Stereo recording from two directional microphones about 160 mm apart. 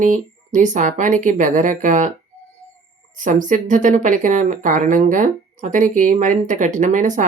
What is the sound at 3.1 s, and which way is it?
Speech, 55° right (ahead or behind).